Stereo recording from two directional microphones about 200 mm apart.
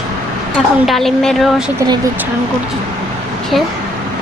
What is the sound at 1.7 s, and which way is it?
Speech, 20° right (ahead or behind).